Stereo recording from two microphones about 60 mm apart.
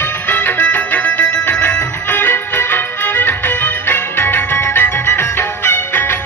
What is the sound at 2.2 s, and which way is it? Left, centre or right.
Music, left.